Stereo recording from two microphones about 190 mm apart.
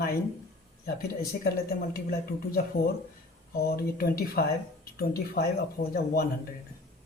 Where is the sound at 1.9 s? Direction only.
55° left (ahead or behind).